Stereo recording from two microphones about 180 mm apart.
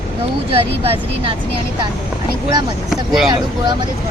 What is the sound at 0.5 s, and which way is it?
Speech, 30° right (ahead or behind).